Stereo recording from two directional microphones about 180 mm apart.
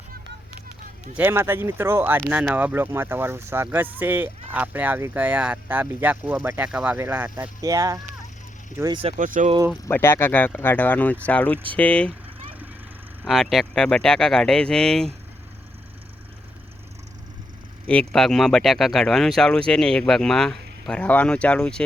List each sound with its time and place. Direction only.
1.1 s speech: 10° right (ahead or behind)
9.0 s speech: 45° right (ahead or behind)
9.9 s speech: 15° left (ahead or behind)
13.2 s speech: centre (ahead or behind)
17.8 s speech: 5° left (ahead or behind)